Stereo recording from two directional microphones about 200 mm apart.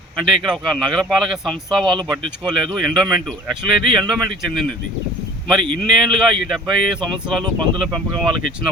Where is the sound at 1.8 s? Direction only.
25° right (ahead or behind).